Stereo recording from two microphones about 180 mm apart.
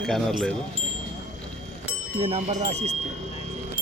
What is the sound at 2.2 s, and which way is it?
Speech, 35° right (ahead or behind).